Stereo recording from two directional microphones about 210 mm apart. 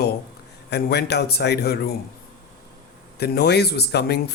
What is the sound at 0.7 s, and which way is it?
Speech, 50° left (ahead or behind).